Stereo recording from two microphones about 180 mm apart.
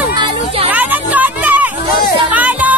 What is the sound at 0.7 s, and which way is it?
Music, 10° right (ahead or behind).